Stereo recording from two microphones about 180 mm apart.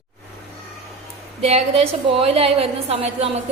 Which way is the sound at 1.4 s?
35° right (ahead or behind).